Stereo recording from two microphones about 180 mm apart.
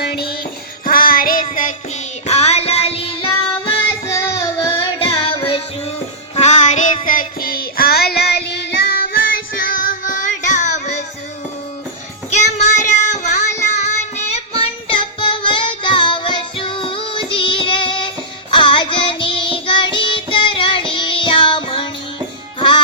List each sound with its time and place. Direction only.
0.0 s music: 60° left (ahead or behind); by 3.2 s 30° left (ahead or behind)
4.0 s music: 15° left (ahead or behind)
4.8 s music: 30° left (ahead or behind)
7.0 s child singing: 50° left (ahead or behind)
12.3 s child singing: 40° left (ahead or behind)
13.7 s music: 40° left (ahead or behind)